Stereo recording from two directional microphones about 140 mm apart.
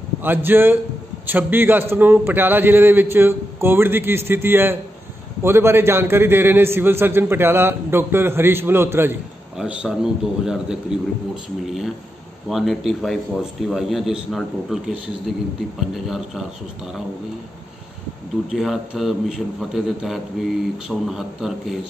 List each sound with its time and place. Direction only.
0.2 s a man's voice: 15° right (ahead or behind)
9.6 s a man's voice: 5° right (ahead or behind)
18.5 s a man's voice: centre (ahead or behind)